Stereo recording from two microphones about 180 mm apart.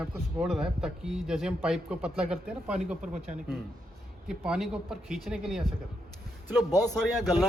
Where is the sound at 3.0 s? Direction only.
45° right (ahead or behind).